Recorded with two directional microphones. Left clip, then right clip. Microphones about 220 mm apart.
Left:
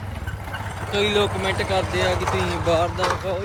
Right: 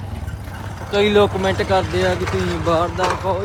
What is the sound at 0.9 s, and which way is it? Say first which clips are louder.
Speech: right 6 dB; 40° right (ahead or behind).